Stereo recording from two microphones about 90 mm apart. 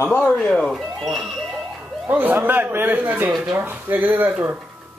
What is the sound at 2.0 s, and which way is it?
Speech, 20° right (ahead or behind).